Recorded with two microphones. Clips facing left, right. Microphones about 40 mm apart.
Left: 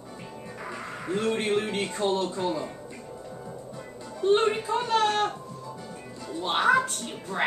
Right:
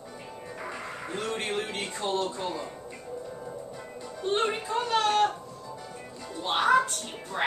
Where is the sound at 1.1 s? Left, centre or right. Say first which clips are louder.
Left 6 dB; centre.